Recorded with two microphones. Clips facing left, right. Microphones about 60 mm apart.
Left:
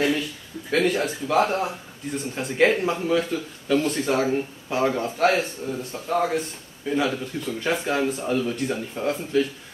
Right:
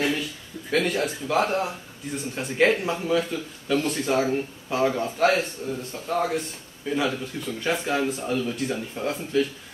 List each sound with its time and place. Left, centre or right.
0.7 s a man's voice: centre